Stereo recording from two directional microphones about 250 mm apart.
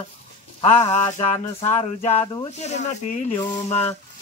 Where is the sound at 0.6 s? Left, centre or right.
Left.